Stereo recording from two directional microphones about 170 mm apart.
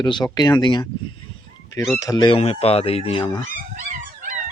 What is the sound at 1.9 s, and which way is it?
Speech, 20° left (ahead or behind).